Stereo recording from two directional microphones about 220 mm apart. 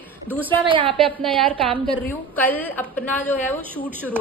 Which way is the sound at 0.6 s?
25° right (ahead or behind).